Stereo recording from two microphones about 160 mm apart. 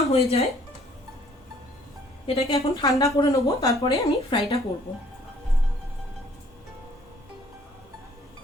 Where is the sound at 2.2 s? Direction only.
35° left (ahead or behind).